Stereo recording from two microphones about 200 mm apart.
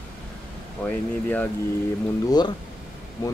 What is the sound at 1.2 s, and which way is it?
Speech, 10° left (ahead or behind).